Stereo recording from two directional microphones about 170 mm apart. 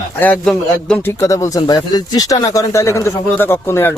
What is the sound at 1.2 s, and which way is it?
Speech, 20° left (ahead or behind).